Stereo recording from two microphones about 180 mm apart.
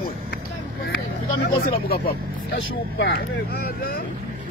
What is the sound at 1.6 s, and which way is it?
Speech, 55° left (ahead or behind).